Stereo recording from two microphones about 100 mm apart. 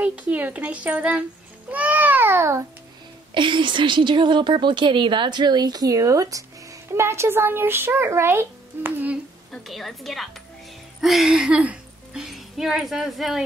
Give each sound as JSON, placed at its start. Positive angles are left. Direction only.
{"t": 0.0, "sound": "a child's voice", "side_deg": -15}
{"t": 3.3, "sound": "a woman's voice", "side_deg": -55}
{"t": 9.5, "sound": "a woman's voice", "side_deg": 0}